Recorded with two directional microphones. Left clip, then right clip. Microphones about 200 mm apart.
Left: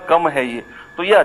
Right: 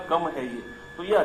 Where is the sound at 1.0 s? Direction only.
35° left (ahead or behind).